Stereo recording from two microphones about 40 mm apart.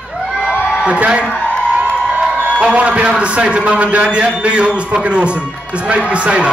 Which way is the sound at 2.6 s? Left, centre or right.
Right.